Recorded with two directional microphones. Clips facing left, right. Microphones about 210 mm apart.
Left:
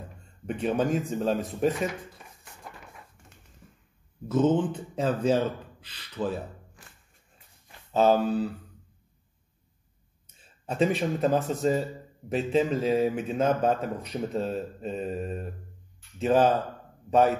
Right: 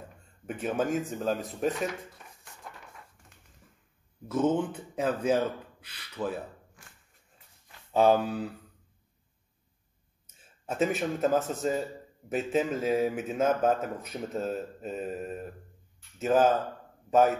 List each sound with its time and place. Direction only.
0.5 s a man's voice: 5° right (ahead or behind)
4.3 s speech: 10° right (ahead or behind)
7.9 s speech: 15° right (ahead or behind)
10.2 s a man's voice: 5° right (ahead or behind)